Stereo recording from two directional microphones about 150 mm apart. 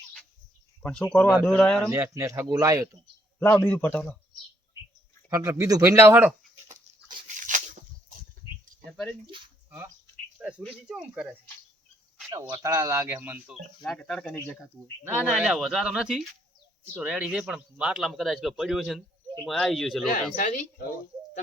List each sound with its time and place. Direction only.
0.8 s a man's voice: 5° left (ahead or behind)
1.9 s speech: 20° right (ahead or behind)
3.4 s a man's voice: 10° left (ahead or behind)
5.3 s speech: 20° right (ahead or behind)
7.3 s a sound: 60° right (ahead or behind)
8.8 s speech: 5° left (ahead or behind)
9.6 s speech: 15° right (ahead or behind)
12.3 s speech: 20° right (ahead or behind)
13.8 s speech: 5° left (ahead or behind)
20.3 s speech: 60° left (ahead or behind)